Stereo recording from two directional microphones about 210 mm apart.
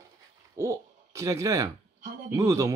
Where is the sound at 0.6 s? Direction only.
15° right (ahead or behind).